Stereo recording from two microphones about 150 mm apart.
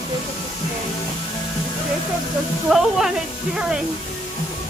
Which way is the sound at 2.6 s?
Centre (ahead or behind).